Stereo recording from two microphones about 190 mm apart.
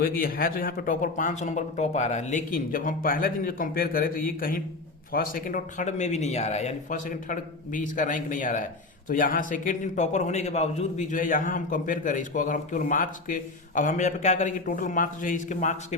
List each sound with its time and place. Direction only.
0.0 s a man's voice: 50° left (ahead or behind)